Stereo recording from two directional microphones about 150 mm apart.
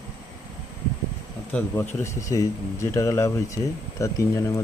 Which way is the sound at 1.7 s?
15° left (ahead or behind).